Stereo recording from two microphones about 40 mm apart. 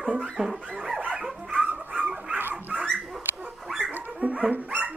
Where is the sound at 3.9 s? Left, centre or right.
Right.